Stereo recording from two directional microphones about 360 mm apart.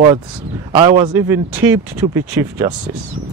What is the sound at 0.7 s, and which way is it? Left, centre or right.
Speech, centre.